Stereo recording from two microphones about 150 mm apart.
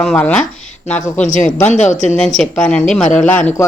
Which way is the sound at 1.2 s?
55° left (ahead or behind).